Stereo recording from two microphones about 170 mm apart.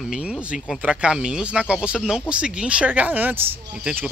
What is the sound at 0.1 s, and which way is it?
Speech, 5° right (ahead or behind).